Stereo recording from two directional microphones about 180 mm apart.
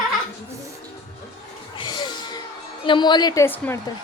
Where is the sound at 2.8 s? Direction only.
25° left (ahead or behind).